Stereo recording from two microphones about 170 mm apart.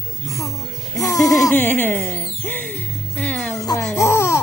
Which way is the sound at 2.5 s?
10° left (ahead or behind).